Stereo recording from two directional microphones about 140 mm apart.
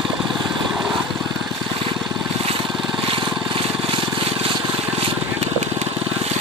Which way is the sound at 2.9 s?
35° right (ahead or behind).